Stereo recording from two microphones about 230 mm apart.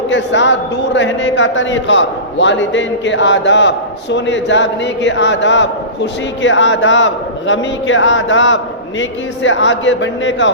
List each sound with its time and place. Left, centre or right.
0.1 s a man's voice: left